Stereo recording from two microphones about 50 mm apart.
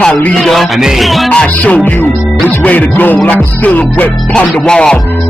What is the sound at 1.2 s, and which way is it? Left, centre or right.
Speech, left.